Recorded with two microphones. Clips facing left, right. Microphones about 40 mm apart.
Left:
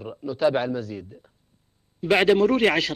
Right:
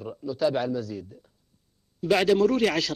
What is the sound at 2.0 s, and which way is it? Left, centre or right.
Speech, left.